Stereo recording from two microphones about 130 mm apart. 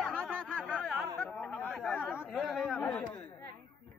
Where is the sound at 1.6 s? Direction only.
5° left (ahead or behind).